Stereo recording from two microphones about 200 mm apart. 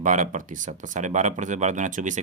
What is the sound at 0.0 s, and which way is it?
Speech, 40° right (ahead or behind).